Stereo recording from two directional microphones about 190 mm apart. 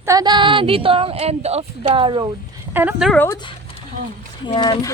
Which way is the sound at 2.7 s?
10° right (ahead or behind).